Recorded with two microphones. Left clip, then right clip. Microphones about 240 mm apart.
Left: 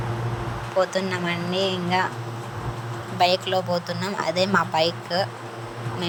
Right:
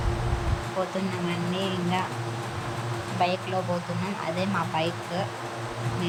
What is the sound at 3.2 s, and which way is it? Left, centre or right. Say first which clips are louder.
Speech: left 6 dB; left.